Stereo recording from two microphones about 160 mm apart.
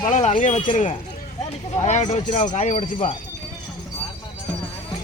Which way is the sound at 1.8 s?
45° left (ahead or behind).